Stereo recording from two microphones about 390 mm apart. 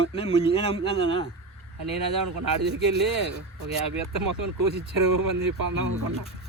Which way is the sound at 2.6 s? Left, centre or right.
Right.